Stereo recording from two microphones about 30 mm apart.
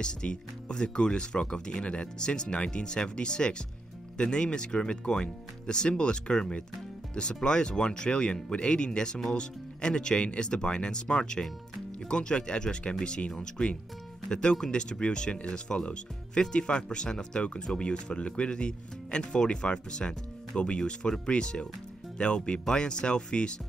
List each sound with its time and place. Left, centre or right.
0.0 s speech: left
7.4 s speech: left